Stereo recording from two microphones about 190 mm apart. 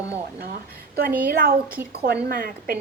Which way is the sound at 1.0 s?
55° right (ahead or behind).